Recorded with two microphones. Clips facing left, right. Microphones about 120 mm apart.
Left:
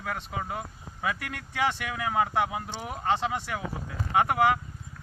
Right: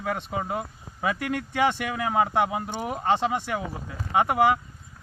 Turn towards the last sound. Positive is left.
turn(degrees=-20)  # may be behind; listen again after turning